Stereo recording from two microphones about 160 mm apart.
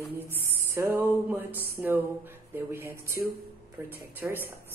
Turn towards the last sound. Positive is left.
turn(degrees=-10)  # may be behind; listen again after turning